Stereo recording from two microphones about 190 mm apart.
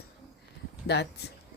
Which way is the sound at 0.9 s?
60° left (ahead or behind).